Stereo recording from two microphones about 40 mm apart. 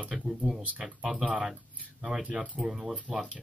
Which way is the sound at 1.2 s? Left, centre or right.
Right.